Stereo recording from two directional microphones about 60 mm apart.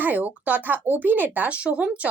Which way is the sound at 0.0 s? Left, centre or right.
Right.